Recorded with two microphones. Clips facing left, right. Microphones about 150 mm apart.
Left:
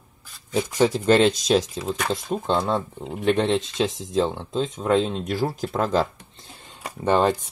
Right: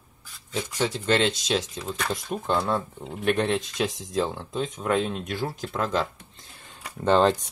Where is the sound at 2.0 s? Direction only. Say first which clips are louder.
Left 2 dB; 25° left (ahead or behind).